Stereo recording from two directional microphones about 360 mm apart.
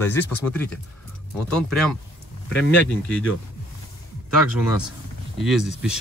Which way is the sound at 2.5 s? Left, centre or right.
Left.